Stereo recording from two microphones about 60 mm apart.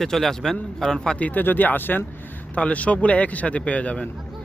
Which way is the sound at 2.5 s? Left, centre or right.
Left.